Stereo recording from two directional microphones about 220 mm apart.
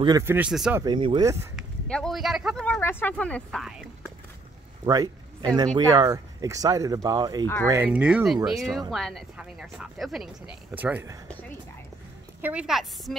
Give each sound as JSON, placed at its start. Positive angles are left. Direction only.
{"t": 0.0, "sound": "speech", "side_deg": -15}
{"t": 0.8, "sound": "speech", "side_deg": -20}
{"t": 1.9, "sound": "speech", "side_deg": 5}
{"t": 4.8, "sound": "a sound", "side_deg": -20}
{"t": 5.9, "sound": "speech", "side_deg": -15}
{"t": 12.4, "sound": "speech", "side_deg": -5}